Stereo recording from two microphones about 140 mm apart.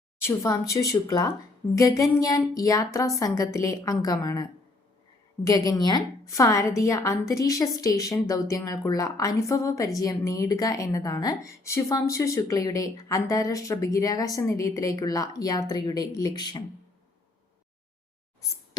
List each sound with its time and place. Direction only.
0.2 s a woman's voice: 20° left (ahead or behind)
5.5 s a woman's voice: 25° left (ahead or behind)